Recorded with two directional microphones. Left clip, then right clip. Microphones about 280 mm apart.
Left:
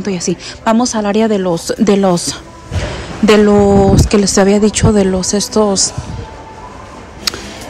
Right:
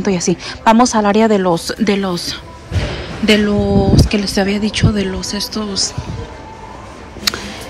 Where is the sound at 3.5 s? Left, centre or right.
Right.